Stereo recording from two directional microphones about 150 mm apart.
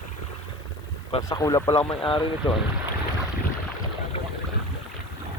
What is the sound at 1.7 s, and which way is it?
Speech, 35° left (ahead or behind).